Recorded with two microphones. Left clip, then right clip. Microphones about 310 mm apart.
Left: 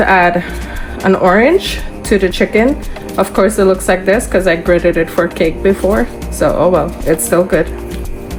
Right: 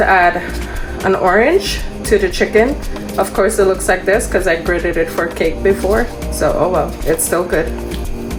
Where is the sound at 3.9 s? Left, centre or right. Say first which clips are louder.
Left 2 dB; left.